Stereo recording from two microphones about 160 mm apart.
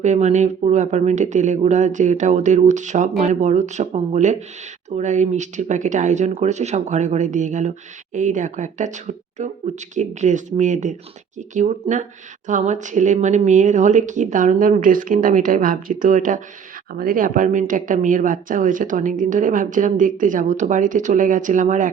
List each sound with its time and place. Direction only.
0.0 s a woman's voice: 45° right (ahead or behind)
16.9 s a woman's voice: 65° right (ahead or behind)